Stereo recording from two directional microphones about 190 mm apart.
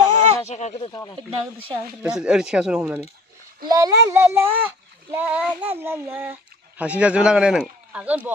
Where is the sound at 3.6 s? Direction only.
20° right (ahead or behind).